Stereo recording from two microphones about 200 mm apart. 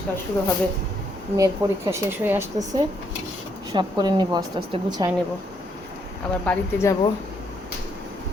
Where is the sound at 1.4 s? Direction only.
15° right (ahead or behind).